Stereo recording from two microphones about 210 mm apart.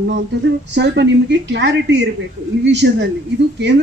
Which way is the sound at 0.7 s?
55° right (ahead or behind).